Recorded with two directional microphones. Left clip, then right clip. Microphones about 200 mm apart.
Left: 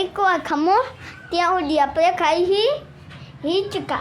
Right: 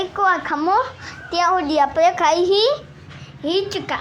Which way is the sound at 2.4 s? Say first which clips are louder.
Right 2 dB; 20° right (ahead or behind).